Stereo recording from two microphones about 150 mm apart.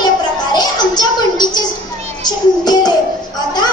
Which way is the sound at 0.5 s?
25° left (ahead or behind).